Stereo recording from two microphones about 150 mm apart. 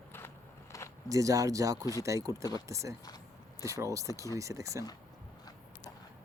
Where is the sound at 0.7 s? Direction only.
20° left (ahead or behind).